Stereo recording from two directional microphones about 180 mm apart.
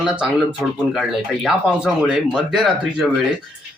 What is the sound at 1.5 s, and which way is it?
Speech, centre (ahead or behind).